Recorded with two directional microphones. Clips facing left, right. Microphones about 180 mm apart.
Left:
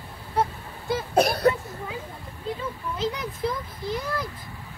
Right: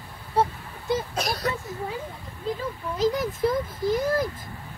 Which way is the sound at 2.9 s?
40° right (ahead or behind).